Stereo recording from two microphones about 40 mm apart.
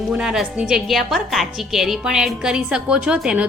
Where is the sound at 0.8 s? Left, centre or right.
Centre; by 3.0 s right.